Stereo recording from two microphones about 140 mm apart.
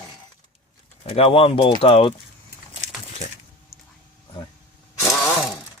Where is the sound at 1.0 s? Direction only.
45° left (ahead or behind).